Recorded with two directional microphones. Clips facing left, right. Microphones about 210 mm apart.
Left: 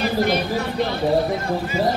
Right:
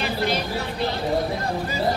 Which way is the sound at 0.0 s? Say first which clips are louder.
Left 5 dB; 50° left (ahead or behind).